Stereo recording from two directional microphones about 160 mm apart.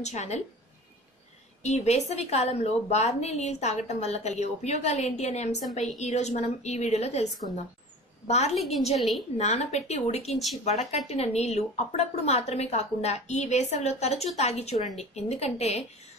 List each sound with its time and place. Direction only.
0.0 s a woman's voice: 45° left (ahead or behind)
1.6 s a woman's voice: 45° left (ahead or behind)
8.9 s a woman's voice: centre (ahead or behind)
9.4 s a woman's voice: 45° left (ahead or behind)